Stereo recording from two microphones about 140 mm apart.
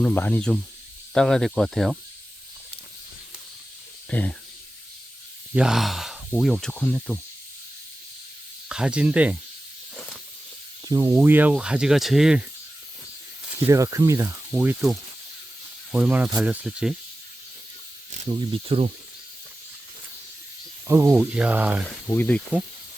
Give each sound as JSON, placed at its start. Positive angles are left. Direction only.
{"t": 0.0, "sound": "speech", "side_deg": 10}
{"t": 4.1, "sound": "speech", "side_deg": 10}
{"t": 5.5, "sound": "speech", "side_deg": -5}
{"t": 8.7, "sound": "speech", "side_deg": -5}
{"t": 9.9, "sound": "snake", "side_deg": 5}
{"t": 10.8, "sound": "snake", "side_deg": -25}
{"t": 11.2, "sound": "speech", "side_deg": -15}
{"t": 13.7, "sound": "speech", "side_deg": -20}
{"t": 14.6, "sound": "speech", "side_deg": -10}
{"t": 18.3, "sound": "speech", "side_deg": -40}
{"t": 20.8, "sound": "speech", "side_deg": -20}
{"t": 22.1, "sound": "speech", "side_deg": 15}